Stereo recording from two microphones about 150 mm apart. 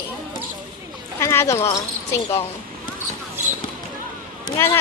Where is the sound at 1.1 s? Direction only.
15° left (ahead or behind).